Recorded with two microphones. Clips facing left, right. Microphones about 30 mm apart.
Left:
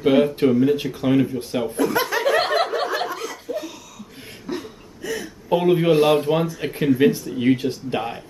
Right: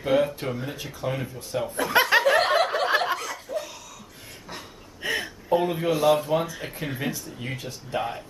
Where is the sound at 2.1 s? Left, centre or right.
Right.